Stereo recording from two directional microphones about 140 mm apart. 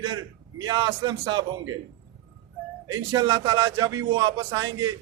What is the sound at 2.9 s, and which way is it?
Speech, 30° right (ahead or behind).